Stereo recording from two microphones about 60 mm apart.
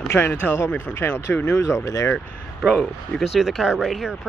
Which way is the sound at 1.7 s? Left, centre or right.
Left.